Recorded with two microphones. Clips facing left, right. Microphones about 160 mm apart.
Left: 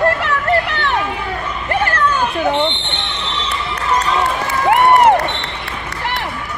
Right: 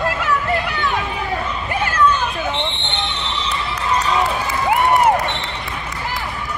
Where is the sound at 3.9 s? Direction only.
65° left (ahead or behind).